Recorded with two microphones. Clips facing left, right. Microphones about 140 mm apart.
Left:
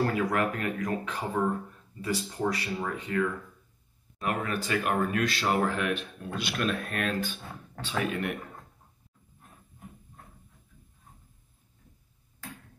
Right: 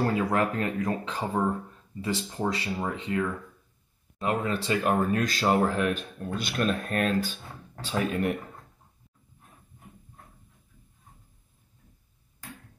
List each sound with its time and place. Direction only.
0.2 s speech: 30° right (ahead or behind)